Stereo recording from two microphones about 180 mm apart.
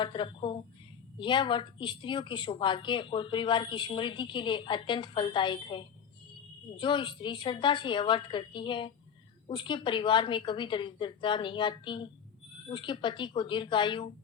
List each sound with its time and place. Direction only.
0.0 s a woman's voice: 25° left (ahead or behind)